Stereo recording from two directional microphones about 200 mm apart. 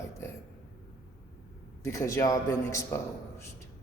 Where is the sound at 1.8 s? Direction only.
15° left (ahead or behind).